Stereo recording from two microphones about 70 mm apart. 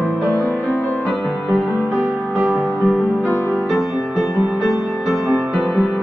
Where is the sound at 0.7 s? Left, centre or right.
Centre.